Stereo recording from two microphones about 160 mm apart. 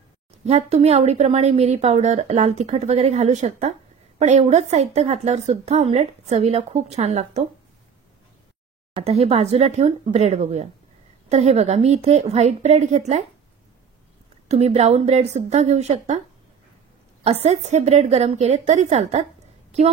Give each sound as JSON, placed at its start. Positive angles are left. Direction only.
{"t": 0.5, "sound": "a woman's voice", "side_deg": -40}
{"t": 8.9, "sound": "a woman's voice", "side_deg": -40}
{"t": 14.5, "sound": "a woman's voice", "side_deg": -40}
{"t": 17.2, "sound": "a woman's voice", "side_deg": -40}